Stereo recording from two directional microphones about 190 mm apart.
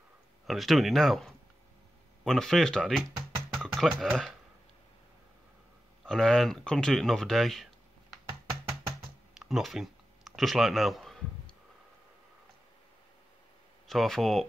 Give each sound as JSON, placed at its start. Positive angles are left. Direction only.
{"t": 0.5, "sound": "speech", "side_deg": 0}
{"t": 6.0, "sound": "speech", "side_deg": 5}
{"t": 8.3, "sound": "music", "side_deg": -25}
{"t": 9.3, "sound": "a sound", "side_deg": 0}
{"t": 13.8, "sound": "speech", "side_deg": 0}